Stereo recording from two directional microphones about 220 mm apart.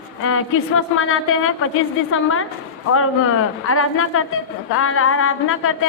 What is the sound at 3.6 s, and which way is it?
Speech, 75° left (ahead or behind).